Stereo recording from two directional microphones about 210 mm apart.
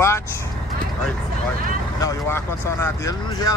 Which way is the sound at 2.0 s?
15° left (ahead or behind).